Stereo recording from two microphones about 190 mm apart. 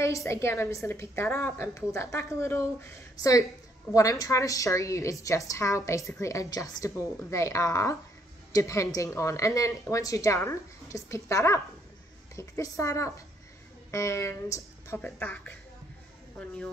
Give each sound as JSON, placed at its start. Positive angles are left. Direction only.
{"t": 0.0, "sound": "a woman's voice", "side_deg": 15}